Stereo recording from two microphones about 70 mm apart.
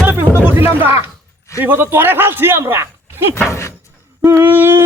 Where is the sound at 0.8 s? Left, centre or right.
Right.